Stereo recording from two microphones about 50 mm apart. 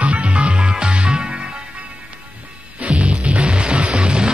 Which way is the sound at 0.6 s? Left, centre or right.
Centre.